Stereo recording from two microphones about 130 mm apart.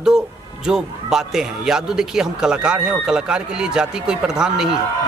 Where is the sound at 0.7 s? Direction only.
5° right (ahead or behind).